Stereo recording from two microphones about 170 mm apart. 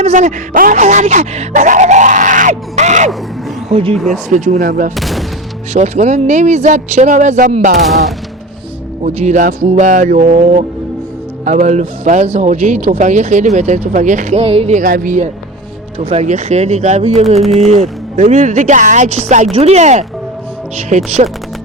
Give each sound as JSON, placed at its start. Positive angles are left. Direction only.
{"t": 0.0, "sound": "speech", "side_deg": -45}
{"t": 3.9, "sound": "speech", "side_deg": 0}
{"t": 4.3, "sound": "speech", "side_deg": -45}
{"t": 4.9, "sound": "speech", "side_deg": 0}
{"t": 5.7, "sound": "speech", "side_deg": -40}
{"t": 9.0, "sound": "speech", "side_deg": -45}